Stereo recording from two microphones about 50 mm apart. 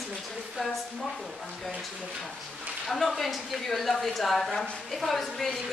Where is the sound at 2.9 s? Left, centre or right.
Centre.